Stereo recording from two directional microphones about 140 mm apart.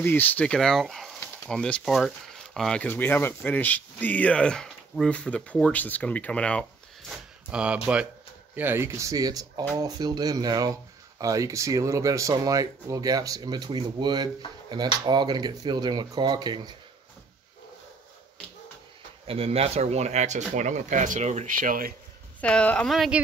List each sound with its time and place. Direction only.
0.0 s speech: 15° left (ahead or behind); by 16.7 s 30° right (ahead or behind)
19.2 s speech: 45° right (ahead or behind); by 21.9 s 85° right
22.4 s speech: 10° left (ahead or behind)